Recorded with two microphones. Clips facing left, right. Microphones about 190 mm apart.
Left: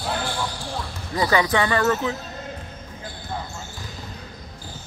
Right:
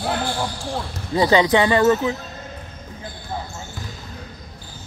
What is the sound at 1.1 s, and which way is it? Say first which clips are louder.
Speech: right 5 dB; 25° right (ahead or behind).